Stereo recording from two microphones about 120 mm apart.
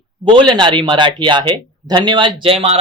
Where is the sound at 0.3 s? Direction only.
40° right (ahead or behind).